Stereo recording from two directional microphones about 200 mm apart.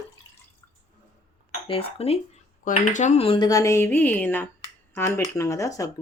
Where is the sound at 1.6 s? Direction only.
30° left (ahead or behind).